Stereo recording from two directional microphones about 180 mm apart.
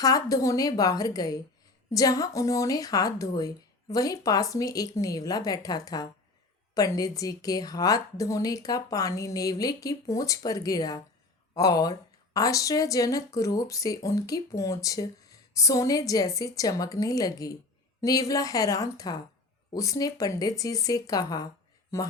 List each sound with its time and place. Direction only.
0.0 s a woman's voice: 20° left (ahead or behind)